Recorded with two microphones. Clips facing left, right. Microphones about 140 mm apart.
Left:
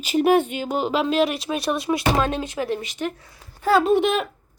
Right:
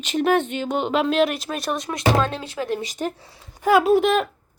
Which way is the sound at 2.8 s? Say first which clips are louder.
Right 1 dB; 40° right (ahead or behind).